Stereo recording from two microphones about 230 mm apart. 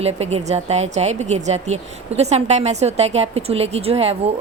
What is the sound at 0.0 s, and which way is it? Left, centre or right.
Speech, right.